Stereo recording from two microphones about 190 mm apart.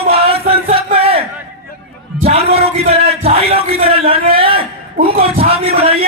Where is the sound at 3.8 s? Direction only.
30° right (ahead or behind).